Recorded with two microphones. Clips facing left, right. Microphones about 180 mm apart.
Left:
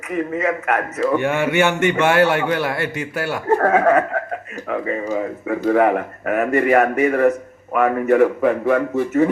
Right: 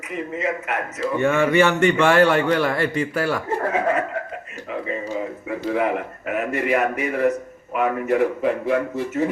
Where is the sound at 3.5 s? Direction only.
55° left (ahead or behind).